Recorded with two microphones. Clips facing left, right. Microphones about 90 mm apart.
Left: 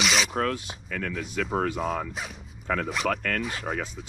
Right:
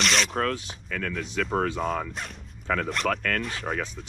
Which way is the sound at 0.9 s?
55° right (ahead or behind).